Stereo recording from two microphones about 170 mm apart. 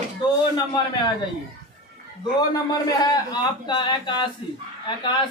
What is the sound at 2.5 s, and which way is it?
A woman's voice, 20° left (ahead or behind).